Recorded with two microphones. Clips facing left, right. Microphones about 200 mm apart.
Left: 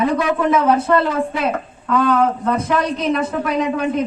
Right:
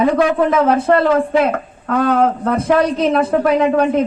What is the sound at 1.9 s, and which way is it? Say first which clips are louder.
A man's voice: right 2 dB; 55° right (ahead or behind).